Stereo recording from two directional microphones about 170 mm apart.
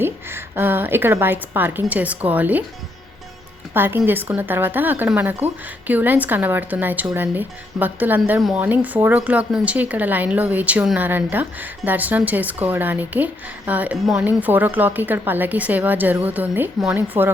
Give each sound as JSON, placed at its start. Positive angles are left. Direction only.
{"t": 0.0, "sound": "a woman's voice", "side_deg": -15}
{"t": 3.8, "sound": "speech", "side_deg": -10}